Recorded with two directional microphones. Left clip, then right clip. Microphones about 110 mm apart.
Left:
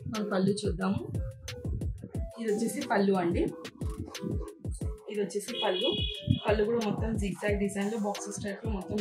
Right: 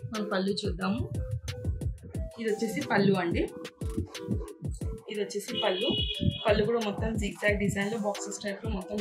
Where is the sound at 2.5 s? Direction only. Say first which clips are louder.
Right 1 dB; 5° left (ahead or behind).